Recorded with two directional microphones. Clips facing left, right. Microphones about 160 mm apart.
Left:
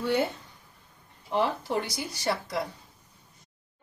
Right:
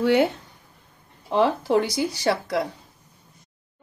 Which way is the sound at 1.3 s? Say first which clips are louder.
Right 7 dB; 90° right.